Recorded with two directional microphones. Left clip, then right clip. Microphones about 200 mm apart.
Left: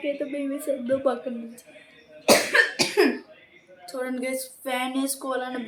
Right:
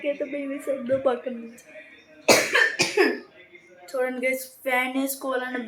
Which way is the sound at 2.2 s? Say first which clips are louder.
Even; 40° left (ahead or behind).